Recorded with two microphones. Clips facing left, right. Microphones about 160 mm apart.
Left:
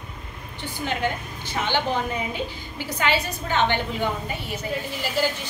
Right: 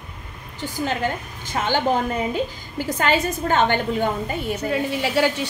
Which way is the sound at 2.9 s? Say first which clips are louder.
Right 4 dB; 45° right (ahead or behind).